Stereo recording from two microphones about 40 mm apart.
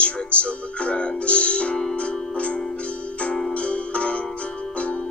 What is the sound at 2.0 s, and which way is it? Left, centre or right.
Music, left.